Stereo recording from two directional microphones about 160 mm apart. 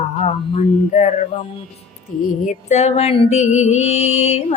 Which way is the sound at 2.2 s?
50° left (ahead or behind).